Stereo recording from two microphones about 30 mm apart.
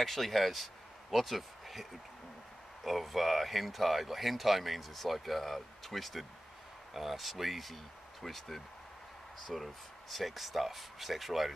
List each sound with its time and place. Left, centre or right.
0.0 s speech: centre